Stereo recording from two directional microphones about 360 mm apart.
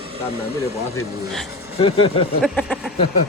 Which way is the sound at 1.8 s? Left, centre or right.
Centre.